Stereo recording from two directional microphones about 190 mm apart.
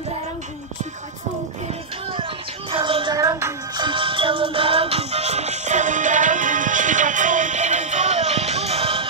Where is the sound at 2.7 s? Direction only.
25° right (ahead or behind).